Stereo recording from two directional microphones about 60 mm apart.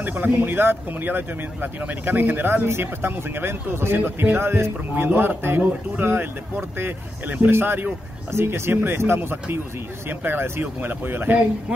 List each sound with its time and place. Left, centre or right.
0.0 s speech: right